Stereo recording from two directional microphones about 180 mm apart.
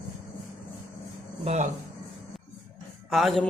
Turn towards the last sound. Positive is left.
turn(degrees=0)  # may be behind; listen again after turning